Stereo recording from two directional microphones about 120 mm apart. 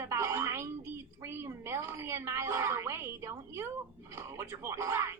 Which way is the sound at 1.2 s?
20° right (ahead or behind).